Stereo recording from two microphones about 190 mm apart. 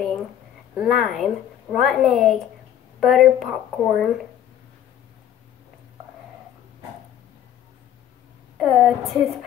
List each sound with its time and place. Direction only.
0.7 s a woman's voice: centre (ahead or behind)
8.5 s a woman's voice: centre (ahead or behind)